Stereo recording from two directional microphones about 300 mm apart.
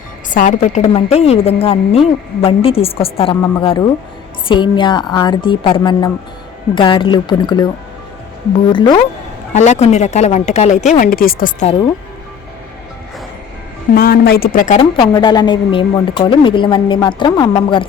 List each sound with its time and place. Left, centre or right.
0.3 s a woman's voice: left
8.7 s a woman's voice: centre
13.9 s a woman's voice: left; by 17.8 s centre